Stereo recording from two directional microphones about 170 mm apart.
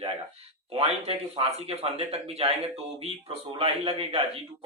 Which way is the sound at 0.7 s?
35° right (ahead or behind).